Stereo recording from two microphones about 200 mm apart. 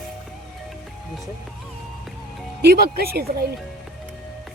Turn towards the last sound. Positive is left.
turn(degrees=-50)  # may be behind; listen again after turning